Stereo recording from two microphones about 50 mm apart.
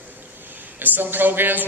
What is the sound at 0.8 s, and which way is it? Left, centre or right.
Speech, right.